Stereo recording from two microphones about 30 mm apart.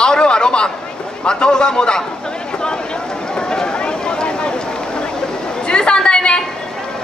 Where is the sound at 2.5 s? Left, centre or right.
Left.